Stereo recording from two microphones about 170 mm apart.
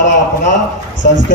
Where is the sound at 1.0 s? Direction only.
55° left (ahead or behind).